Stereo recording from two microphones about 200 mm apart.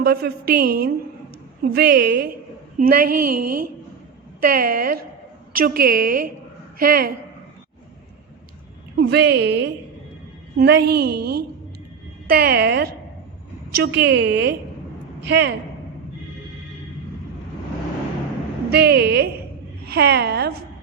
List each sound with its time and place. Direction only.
0.0 s a woman's voice: 50° right (ahead or behind)
9.0 s a woman's voice: 55° right (ahead or behind)
18.7 s a woman's voice: 55° right (ahead or behind)